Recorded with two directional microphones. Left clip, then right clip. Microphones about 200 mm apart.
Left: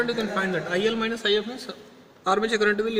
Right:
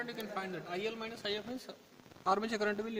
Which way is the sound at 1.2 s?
50° right (ahead or behind).